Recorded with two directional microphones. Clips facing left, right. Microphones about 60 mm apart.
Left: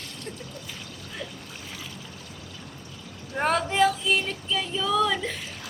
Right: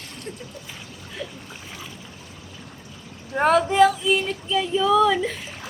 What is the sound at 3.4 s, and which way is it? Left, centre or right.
Female singing, centre.